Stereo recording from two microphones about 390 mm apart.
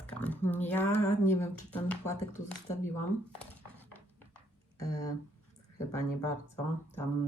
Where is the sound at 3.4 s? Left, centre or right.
Centre.